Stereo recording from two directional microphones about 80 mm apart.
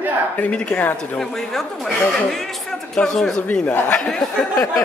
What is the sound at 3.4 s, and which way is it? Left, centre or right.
Speech, left.